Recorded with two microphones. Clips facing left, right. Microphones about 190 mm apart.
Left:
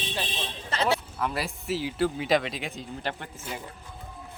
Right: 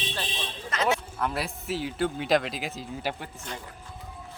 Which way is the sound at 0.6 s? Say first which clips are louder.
Even; 30° left (ahead or behind).